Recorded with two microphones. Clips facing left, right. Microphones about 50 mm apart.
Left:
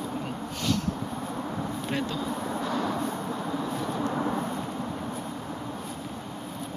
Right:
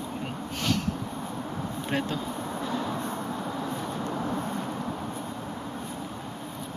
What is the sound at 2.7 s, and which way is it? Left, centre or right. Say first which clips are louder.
Vehicle: left 2 dB; centre.